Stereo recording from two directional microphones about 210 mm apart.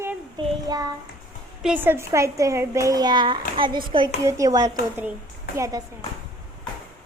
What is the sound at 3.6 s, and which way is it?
Child singing, 25° right (ahead or behind).